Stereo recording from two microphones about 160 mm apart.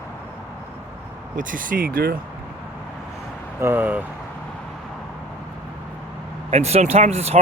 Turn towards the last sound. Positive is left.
turn(degrees=-40)  # may be behind; listen again after turning